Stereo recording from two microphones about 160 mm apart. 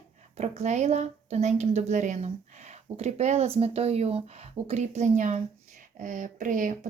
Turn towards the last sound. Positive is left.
turn(degrees=-55)  # may be behind; listen again after turning